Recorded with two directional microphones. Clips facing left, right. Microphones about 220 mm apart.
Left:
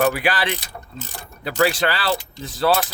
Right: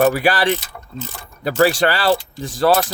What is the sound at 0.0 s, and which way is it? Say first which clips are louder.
Speech: right 4 dB; 40° right (ahead or behind).